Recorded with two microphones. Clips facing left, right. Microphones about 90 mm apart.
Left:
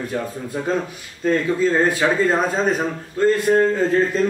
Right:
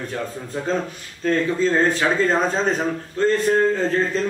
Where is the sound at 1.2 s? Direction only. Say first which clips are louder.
Left 1 dB; 10° left (ahead or behind).